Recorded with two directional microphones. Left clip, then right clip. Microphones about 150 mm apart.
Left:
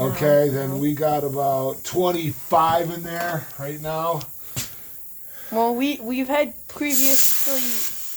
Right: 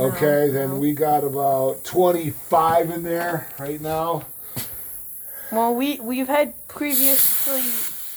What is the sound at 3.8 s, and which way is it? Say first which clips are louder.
Speech: right 1 dB; 90° left.